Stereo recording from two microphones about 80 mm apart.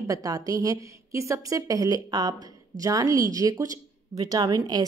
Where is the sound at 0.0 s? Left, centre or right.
Right.